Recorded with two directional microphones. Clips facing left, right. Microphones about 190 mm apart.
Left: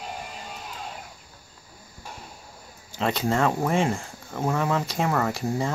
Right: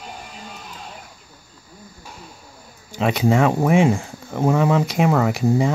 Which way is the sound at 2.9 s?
15° right (ahead or behind).